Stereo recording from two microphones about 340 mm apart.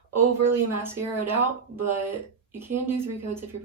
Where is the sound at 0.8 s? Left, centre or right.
Centre.